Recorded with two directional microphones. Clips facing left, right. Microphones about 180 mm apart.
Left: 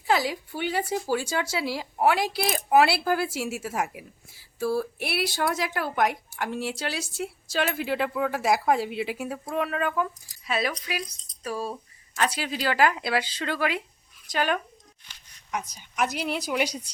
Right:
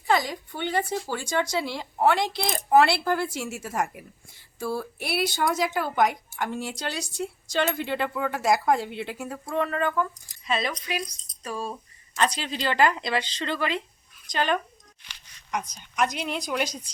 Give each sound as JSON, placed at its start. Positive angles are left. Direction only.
{"t": 0.1, "sound": "speech", "side_deg": 5}
{"t": 15.0, "sound": "a sound", "side_deg": -85}
{"t": 15.5, "sound": "speech", "side_deg": 5}